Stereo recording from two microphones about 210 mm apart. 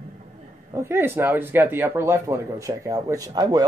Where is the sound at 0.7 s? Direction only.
10° right (ahead or behind).